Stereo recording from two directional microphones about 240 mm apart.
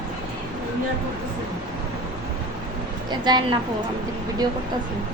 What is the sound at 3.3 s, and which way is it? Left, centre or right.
Speech, centre.